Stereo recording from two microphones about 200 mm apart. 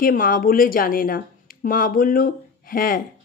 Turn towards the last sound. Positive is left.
turn(degrees=45)  # may be behind; listen again after turning